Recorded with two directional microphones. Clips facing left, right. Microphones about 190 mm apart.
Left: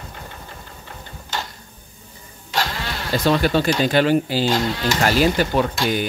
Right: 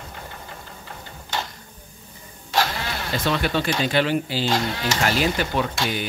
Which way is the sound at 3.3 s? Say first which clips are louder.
Left 6 dB; 40° left (ahead or behind).